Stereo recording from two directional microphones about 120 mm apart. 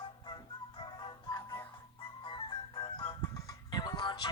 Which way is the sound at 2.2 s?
45° left (ahead or behind).